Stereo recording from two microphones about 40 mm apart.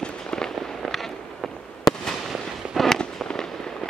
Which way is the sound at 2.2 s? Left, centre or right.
Centre.